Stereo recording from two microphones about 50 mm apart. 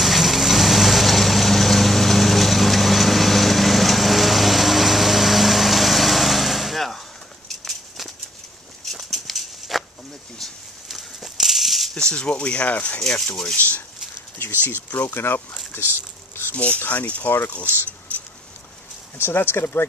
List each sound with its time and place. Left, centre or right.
0.0 s vehicle: centre
7.4 s a sound: centre
11.9 s speech: centre
13.0 s rub: centre
13.6 s speech: left
15.0 s speech: left
16.5 s speech: left
18.1 s a sound: left
19.1 s speech: left